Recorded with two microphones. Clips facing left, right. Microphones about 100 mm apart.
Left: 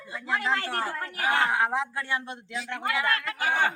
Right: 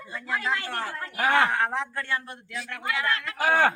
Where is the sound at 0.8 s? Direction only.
45° left (ahead or behind).